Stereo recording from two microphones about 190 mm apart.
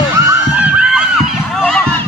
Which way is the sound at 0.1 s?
10° right (ahead or behind).